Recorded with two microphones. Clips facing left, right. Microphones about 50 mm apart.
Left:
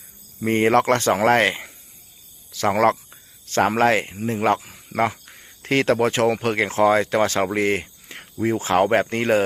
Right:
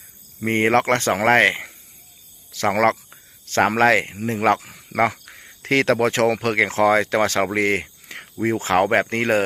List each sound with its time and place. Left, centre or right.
0.4 s speech: right
7.5 s a sound: right
8.4 s speech: right